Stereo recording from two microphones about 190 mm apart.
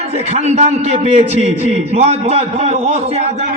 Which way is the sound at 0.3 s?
35° right (ahead or behind).